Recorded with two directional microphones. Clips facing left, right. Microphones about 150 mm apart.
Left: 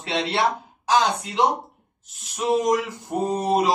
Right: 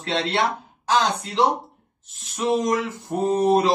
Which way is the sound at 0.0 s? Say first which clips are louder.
Right 1 dB; 10° left (ahead or behind).